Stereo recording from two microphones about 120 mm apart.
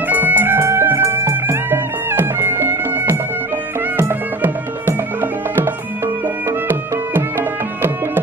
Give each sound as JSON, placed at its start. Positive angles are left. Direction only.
{"t": 0.1, "sound": "music", "side_deg": -15}
{"t": 6.7, "sound": "music", "side_deg": -20}